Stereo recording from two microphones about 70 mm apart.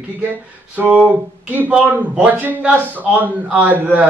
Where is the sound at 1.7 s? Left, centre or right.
Centre.